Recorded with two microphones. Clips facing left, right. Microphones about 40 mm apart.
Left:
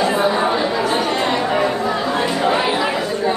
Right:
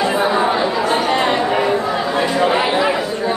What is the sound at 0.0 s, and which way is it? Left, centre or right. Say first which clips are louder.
Chatter: right 1 dB; centre.